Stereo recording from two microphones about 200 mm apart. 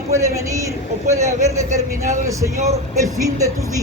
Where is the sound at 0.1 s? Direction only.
15° right (ahead or behind).